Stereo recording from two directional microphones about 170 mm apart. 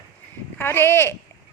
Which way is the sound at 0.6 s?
15° left (ahead or behind).